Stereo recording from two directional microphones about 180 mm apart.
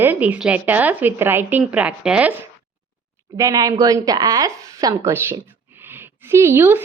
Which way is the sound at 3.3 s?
20° right (ahead or behind).